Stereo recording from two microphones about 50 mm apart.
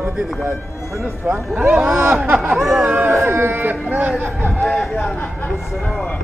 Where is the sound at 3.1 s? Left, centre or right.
Right.